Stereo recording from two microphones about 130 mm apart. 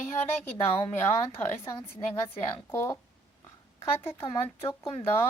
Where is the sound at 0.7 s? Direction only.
50° left (ahead or behind).